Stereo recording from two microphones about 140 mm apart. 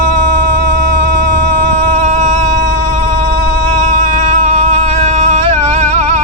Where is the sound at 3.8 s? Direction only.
60° right (ahead or behind).